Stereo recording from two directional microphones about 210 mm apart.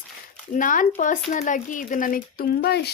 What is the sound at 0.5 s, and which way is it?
Speech, 40° left (ahead or behind).